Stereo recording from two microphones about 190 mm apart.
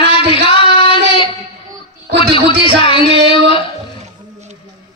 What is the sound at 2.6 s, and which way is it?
Speech, 30° left (ahead or behind).